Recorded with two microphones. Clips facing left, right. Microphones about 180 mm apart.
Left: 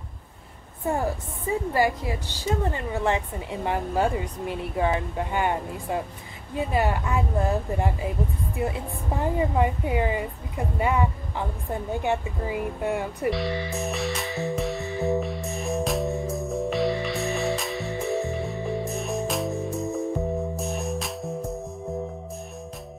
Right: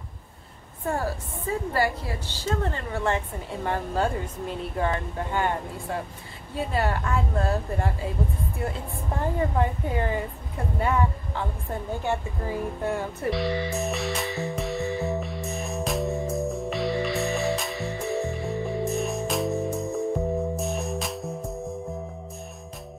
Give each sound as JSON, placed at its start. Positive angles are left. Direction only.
{"t": 0.8, "sound": "speech", "side_deg": 15}
{"t": 13.3, "sound": "music", "side_deg": 0}